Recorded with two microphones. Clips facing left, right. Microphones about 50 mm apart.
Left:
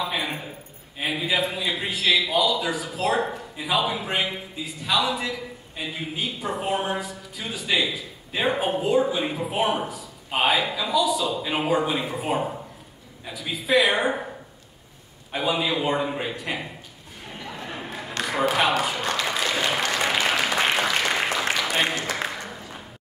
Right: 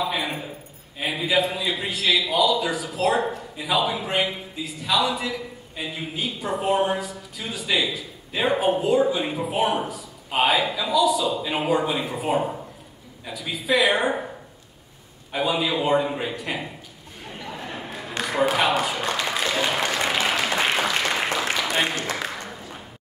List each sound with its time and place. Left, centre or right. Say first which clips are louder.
0.0 s a sound: right 2 dB; centre
0.9 s a man's voice: right 2 dB; centre
15.3 s a man's voice: right 1 dB; centre
17.6 s a sound: even; centre
18.5 s speech: even; centre
19.9 s applause: even; centre